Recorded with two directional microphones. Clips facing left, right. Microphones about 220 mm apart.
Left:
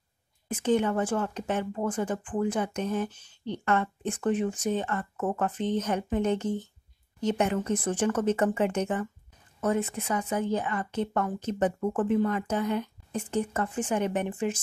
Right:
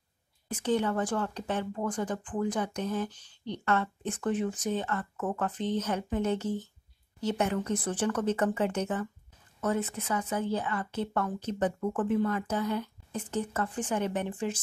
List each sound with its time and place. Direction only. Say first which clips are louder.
0.5 s speech: left 3 dB; 10° left (ahead or behind)
5.1 s speech: left 3 dB; 25° left (ahead or behind)
5.4 s speech: left 2 dB; 10° left (ahead or behind)
11.8 s speech: left 2 dB; 25° left (ahead or behind); by 14.6 s 10° left (ahead or behind)